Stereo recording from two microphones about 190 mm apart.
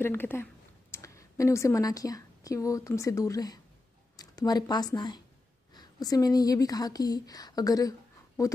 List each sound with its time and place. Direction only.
0.0 s a woman's voice: 10° left (ahead or behind)